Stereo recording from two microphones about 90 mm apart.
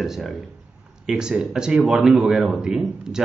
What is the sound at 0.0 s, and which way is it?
Speech, centre (ahead or behind).